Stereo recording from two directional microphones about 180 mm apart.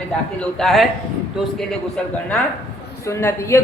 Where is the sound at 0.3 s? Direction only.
Centre (ahead or behind).